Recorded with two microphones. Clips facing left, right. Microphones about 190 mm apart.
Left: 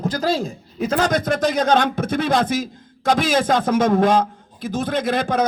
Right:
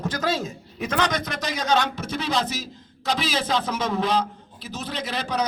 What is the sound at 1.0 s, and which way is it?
A man's voice, 50° left (ahead or behind).